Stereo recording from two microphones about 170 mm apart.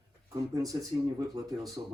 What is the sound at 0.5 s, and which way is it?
Speech, 20° right (ahead or behind).